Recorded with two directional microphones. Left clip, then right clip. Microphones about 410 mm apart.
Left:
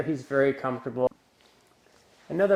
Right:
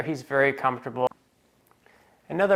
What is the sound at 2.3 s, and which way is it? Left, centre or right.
Speech, right.